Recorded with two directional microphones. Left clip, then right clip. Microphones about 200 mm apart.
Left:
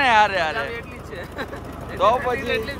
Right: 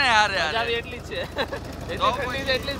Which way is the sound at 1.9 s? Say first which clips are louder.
Left 5 dB; centre (ahead or behind).